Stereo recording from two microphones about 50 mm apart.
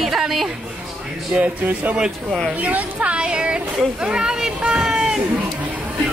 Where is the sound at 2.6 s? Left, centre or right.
Right; by 5.2 s centre.